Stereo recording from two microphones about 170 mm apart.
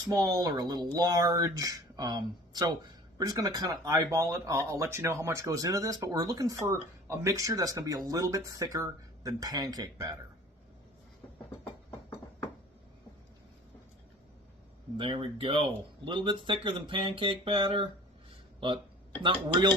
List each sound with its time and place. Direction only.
0.1 s speech: 20° right (ahead or behind)
14.9 s speech: 30° right (ahead or behind)
19.2 s speech: 30° right (ahead or behind)